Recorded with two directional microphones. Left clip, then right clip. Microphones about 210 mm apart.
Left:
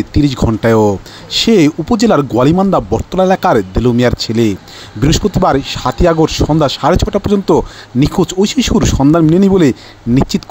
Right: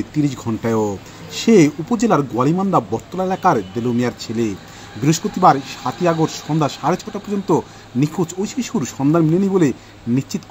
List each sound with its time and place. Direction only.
0.1 s speech: 40° left (ahead or behind)